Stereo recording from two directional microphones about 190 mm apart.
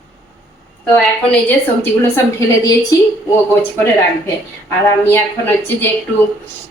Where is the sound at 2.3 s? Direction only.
20° left (ahead or behind).